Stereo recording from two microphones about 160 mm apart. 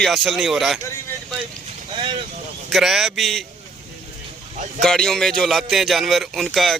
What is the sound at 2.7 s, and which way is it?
Speech, centre (ahead or behind).